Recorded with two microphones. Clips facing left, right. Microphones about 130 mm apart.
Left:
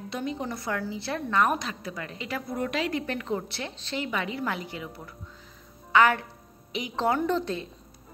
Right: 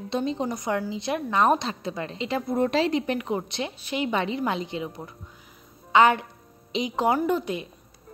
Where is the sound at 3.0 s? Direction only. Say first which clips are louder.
Right 3 dB; 20° right (ahead or behind).